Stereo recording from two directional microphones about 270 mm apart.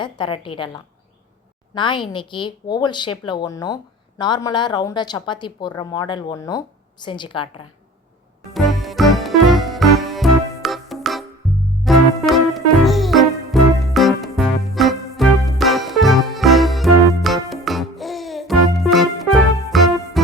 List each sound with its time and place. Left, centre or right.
0.0 s a woman's voice: centre
8.5 s music: centre